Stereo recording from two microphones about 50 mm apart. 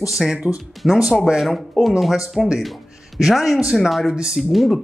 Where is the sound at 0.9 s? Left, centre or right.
Centre.